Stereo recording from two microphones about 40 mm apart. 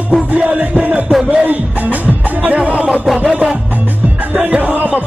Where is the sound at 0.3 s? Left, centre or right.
Right.